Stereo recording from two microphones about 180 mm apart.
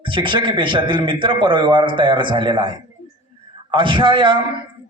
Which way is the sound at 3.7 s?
25° right (ahead or behind).